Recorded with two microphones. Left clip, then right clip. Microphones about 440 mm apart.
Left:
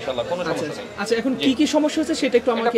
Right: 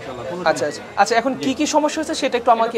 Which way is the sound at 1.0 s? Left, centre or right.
Right.